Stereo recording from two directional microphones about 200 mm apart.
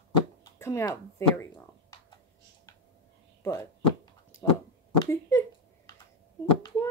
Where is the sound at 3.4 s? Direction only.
15° left (ahead or behind).